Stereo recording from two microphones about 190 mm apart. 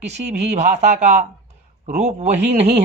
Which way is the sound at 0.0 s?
35° right (ahead or behind).